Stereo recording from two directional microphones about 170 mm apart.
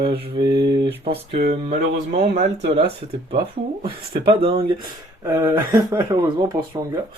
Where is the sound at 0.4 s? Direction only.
30° right (ahead or behind).